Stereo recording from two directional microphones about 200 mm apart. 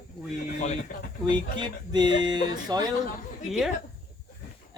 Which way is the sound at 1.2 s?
20° right (ahead or behind).